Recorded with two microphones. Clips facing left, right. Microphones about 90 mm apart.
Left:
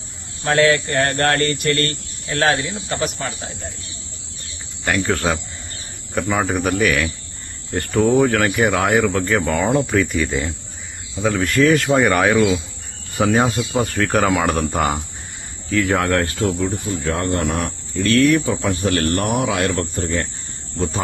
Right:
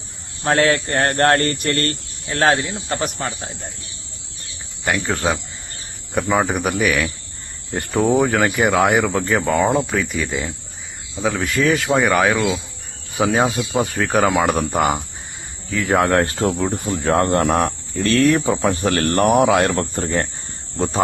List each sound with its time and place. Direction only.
0.4 s speech: 35° right (ahead or behind)
4.9 s speech: 15° right (ahead or behind)
9.7 s speech: centre (ahead or behind)
16.0 s speech: 25° right (ahead or behind)
16.6 s speech: 45° right (ahead or behind)